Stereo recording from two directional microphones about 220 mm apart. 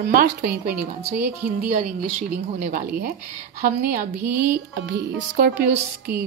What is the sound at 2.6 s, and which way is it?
Music, 45° right (ahead or behind).